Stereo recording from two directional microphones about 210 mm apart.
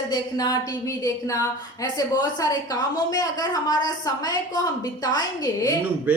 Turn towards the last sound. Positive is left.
turn(degrees=15)  # may be behind; listen again after turning